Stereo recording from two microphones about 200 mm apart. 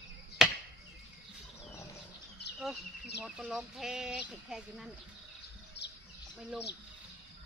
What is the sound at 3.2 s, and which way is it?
Speech, 5° right (ahead or behind).